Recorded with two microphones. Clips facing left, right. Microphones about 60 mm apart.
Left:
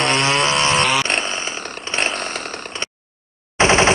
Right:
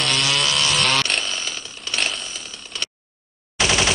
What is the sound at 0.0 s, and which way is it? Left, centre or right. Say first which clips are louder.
Chainsaw: left 5 dB; left.